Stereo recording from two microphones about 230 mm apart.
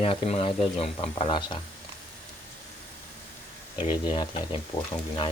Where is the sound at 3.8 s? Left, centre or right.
Left.